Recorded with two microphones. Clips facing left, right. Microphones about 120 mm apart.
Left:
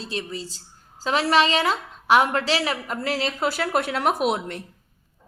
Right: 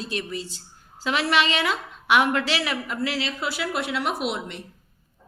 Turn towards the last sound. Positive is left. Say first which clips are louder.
# left 4 dB
turn(degrees=45)  # may be behind; listen again after turning